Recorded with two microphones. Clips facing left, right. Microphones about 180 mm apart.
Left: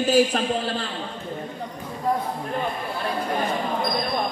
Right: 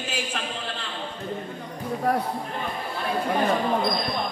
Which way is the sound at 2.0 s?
70° right (ahead or behind).